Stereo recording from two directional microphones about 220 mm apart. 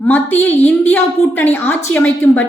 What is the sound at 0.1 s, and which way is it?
A woman's voice, 10° left (ahead or behind).